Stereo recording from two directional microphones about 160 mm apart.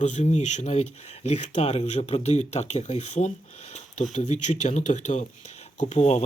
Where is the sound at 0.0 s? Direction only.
45° left (ahead or behind).